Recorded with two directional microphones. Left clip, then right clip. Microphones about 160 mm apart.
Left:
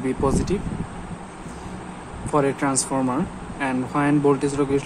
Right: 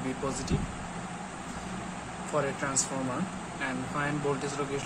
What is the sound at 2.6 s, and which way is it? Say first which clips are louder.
Speech: left 9 dB; 55° left (ahead or behind).